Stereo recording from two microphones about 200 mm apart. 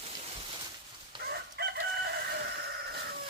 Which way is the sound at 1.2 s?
55° right (ahead or behind).